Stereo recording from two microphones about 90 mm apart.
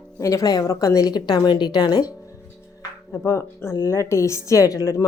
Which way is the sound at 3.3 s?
30° left (ahead or behind).